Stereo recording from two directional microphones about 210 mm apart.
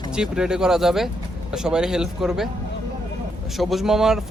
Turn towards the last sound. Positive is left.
turn(degrees=0)  # may be behind; listen again after turning